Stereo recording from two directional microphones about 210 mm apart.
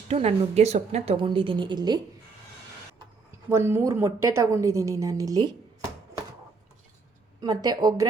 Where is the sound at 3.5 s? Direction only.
10° right (ahead or behind).